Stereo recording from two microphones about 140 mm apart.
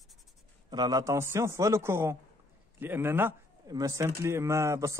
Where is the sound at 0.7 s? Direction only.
25° right (ahead or behind).